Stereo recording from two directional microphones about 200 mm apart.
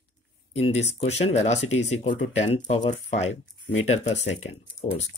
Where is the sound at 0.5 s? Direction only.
30° left (ahead or behind).